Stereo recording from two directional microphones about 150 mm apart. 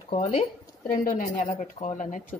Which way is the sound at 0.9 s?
65° left (ahead or behind).